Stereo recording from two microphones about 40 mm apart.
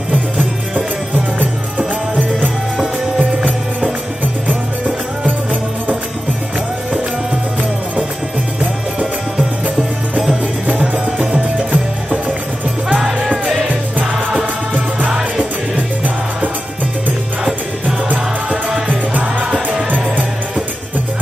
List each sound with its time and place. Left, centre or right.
1.4 s music: right
4.2 s music: right
10.8 s music: right
14.4 s music: right
17.8 s music: right